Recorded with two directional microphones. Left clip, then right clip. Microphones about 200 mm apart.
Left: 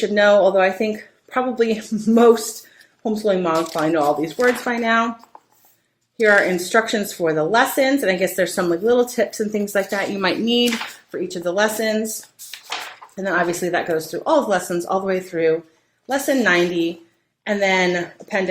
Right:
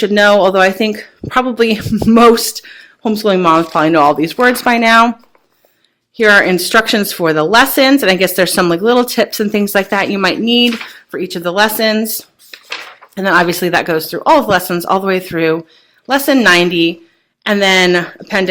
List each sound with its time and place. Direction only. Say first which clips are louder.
0.0 s speech: right 5 dB; 45° right (ahead or behind)
6.1 s speech: right 7 dB; 50° right (ahead or behind)
13.1 s speech: right 9 dB; 40° right (ahead or behind)